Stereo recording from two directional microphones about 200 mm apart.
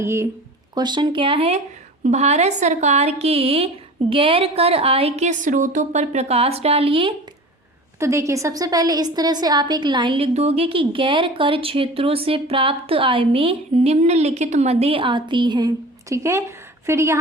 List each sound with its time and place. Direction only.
0.0 s a woman's voice: 15° right (ahead or behind)
7.9 s a woman's voice: 15° right (ahead or behind)